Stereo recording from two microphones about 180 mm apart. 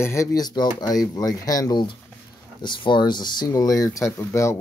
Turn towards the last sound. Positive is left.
turn(degrees=15)  # may be behind; listen again after turning